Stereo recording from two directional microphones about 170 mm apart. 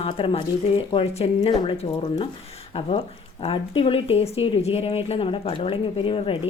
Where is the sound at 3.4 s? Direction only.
30° left (ahead or behind).